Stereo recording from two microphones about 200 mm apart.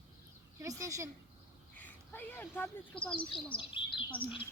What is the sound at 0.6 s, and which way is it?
Speech, 15° right (ahead or behind).